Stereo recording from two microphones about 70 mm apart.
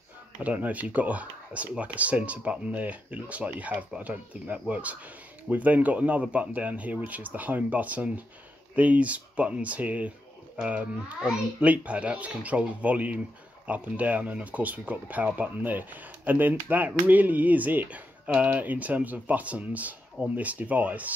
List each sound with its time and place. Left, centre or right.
0.4 s speech: right